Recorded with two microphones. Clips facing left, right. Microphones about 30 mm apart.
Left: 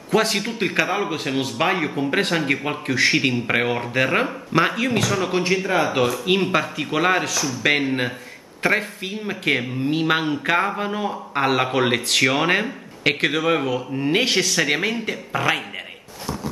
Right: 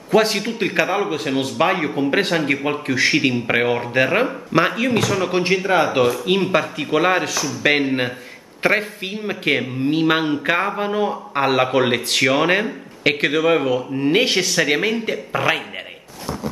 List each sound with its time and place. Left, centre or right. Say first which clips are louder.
0.1 s speech: right 3 dB; centre
5.5 s speech: right 4 dB; centre
5.9 s speech: right 2 dB; centre